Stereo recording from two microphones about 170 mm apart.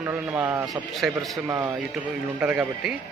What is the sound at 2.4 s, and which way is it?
Speech, 5° right (ahead or behind).